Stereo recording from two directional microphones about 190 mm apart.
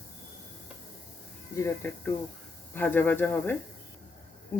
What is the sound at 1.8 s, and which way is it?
Speech, 10° left (ahead or behind).